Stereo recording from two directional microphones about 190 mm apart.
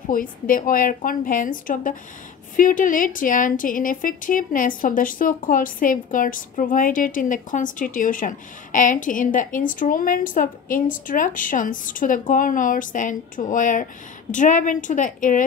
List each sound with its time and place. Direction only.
0.1 s a woman's voice: 45° left (ahead or behind)